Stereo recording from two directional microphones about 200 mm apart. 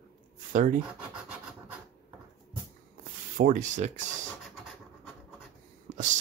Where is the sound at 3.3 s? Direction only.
40° right (ahead or behind).